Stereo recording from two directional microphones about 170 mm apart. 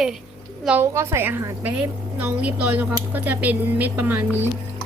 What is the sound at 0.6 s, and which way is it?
A woman's voice, 10° right (ahead or behind).